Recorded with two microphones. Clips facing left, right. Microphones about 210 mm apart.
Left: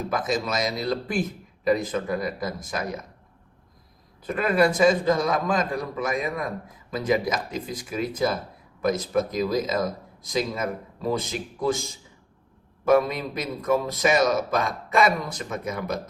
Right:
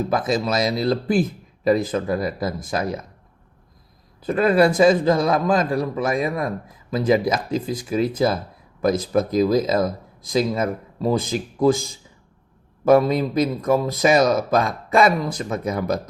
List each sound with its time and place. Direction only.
0.1 s a man's voice: 30° right (ahead or behind)
4.2 s a man's voice: 35° right (ahead or behind)
12.8 s a man's voice: 35° right (ahead or behind)